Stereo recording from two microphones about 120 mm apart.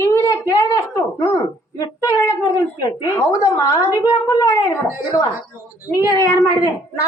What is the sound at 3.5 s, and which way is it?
A woman's voice, 30° left (ahead or behind).